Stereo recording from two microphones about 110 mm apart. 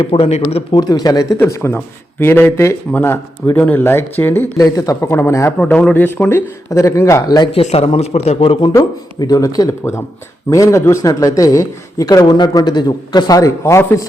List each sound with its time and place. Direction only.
0.0 s speech: 65° left (ahead or behind)
0.7 s a man's voice: 35° left (ahead or behind); by 4.6 s 20° left (ahead or behind)
4.6 s speech: 30° left (ahead or behind)
5.5 s speech: 10° left (ahead or behind); by 7.5 s 40° left (ahead or behind)
7.5 s a man's voice: 70° left (ahead or behind)
8.7 s a man's voice: 35° left (ahead or behind)